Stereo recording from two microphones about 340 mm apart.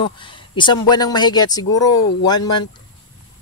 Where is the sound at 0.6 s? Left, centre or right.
Centre.